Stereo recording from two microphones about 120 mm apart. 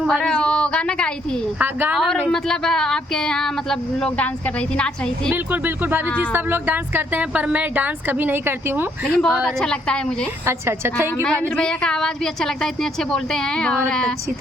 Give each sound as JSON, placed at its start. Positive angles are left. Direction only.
{"t": 0.0, "sound": "a woman's voice", "side_deg": 5}
{"t": 1.5, "sound": "speech", "side_deg": -15}
{"t": 2.3, "sound": "speech", "side_deg": 5}
{"t": 5.3, "sound": "speech", "side_deg": -15}
{"t": 9.0, "sound": "a woman's voice", "side_deg": 5}
{"t": 10.4, "sound": "a woman's voice", "side_deg": -20}
{"t": 11.4, "sound": "speech", "side_deg": 5}